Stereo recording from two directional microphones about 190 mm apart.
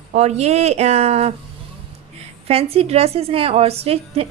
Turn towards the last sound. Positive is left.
turn(degrees=-30)  # may be behind; listen again after turning